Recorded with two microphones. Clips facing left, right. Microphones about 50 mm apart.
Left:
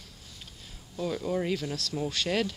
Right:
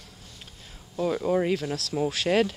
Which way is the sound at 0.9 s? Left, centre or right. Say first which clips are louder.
Right 6 dB; centre.